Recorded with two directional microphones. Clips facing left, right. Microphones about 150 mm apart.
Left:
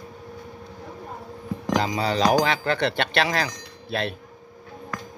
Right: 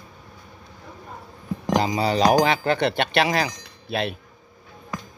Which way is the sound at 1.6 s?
15° right (ahead or behind).